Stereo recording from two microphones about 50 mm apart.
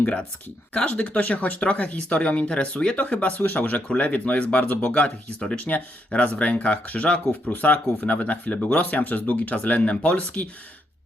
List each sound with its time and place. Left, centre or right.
0.0 s speech: left